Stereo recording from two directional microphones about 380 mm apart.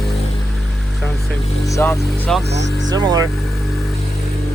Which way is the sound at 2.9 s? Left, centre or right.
Centre.